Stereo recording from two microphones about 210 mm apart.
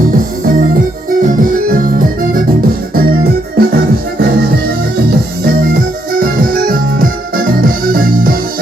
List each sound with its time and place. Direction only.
1.2 s music: 40° right (ahead or behind)
3.6 s music: 45° right (ahead or behind)
6.1 s music: 45° right (ahead or behind)